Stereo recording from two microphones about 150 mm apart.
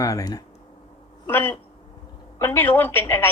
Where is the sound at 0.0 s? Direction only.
25° left (ahead or behind).